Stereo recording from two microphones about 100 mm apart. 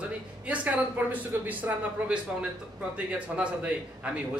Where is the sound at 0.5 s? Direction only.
15° right (ahead or behind).